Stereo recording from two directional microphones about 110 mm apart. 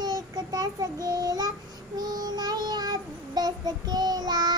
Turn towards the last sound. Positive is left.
turn(degrees=-40)  # may be behind; listen again after turning